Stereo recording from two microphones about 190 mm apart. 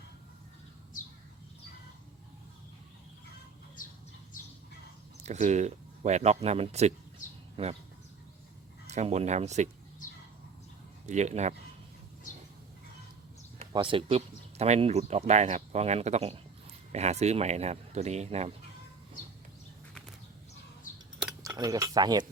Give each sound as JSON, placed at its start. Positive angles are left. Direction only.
{"t": 5.2, "sound": "speech", "side_deg": -35}
{"t": 8.9, "sound": "speech", "side_deg": -35}
{"t": 11.0, "sound": "speech", "side_deg": -40}
{"t": 13.6, "sound": "speech", "side_deg": -25}
{"t": 21.4, "sound": "speech", "side_deg": -20}